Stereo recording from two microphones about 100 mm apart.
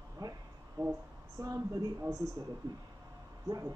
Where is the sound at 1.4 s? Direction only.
35° right (ahead or behind).